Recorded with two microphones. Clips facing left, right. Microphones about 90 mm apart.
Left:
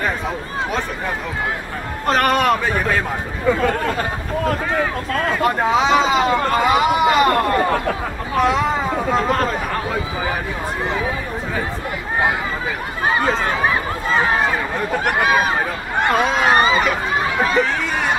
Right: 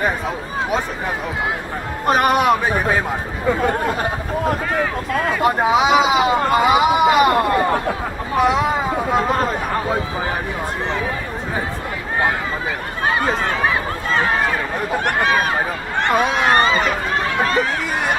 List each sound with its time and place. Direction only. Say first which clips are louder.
2.0 s speech: right 1 dB; 15° right (ahead or behind)
5.1 s speech: right 1 dB; 5° right (ahead or behind)
13.0 s a sound: left 1 dB; centre (ahead or behind)
13.4 s run: even; 5° left (ahead or behind)
15.0 s speech: left 1 dB; 5° left (ahead or behind)